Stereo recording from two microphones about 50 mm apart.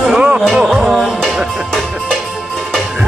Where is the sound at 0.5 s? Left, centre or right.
Centre.